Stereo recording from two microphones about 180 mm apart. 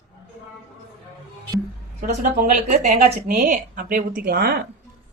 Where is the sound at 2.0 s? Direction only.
45° right (ahead or behind).